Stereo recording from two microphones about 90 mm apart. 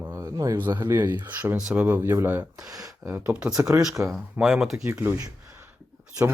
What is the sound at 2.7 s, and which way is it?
Speech, 40° right (ahead or behind).